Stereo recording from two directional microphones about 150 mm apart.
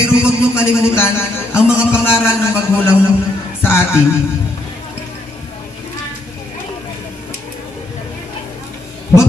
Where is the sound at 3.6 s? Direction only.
15° left (ahead or behind).